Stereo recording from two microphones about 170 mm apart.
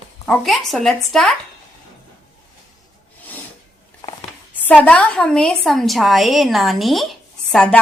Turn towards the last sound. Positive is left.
turn(degrees=5)  # may be behind; listen again after turning